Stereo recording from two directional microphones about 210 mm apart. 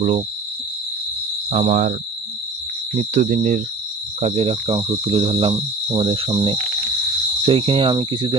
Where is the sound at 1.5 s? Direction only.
35° right (ahead or behind).